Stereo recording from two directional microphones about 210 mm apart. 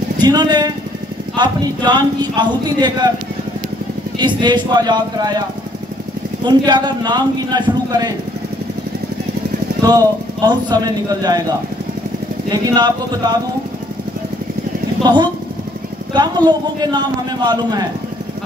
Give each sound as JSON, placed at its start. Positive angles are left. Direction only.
{"t": 0.2, "sound": "a man's voice", "side_deg": -20}
{"t": 4.2, "sound": "a man's voice", "side_deg": -20}
{"t": 6.4, "sound": "a man's voice", "side_deg": -20}
{"t": 9.8, "sound": "a man's voice", "side_deg": -20}
{"t": 12.4, "sound": "a man's voice", "side_deg": -20}
{"t": 15.0, "sound": "a man's voice", "side_deg": -20}